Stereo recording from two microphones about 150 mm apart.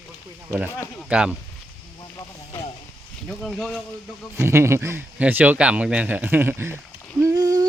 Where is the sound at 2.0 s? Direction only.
25° left (ahead or behind).